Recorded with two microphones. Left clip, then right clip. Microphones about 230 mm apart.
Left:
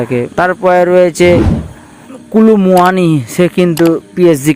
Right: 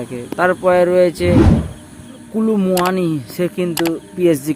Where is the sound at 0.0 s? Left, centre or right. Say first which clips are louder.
Left 6 dB; left.